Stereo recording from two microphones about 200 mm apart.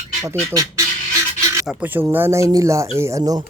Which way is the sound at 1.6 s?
5° right (ahead or behind).